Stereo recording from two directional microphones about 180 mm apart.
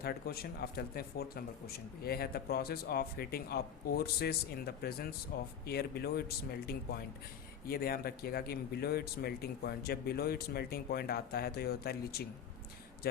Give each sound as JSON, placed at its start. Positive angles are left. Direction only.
{"t": 0.0, "sound": "speech", "side_deg": 60}